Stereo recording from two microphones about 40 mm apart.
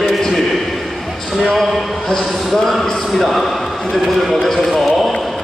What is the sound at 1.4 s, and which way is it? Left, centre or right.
A man's voice, centre.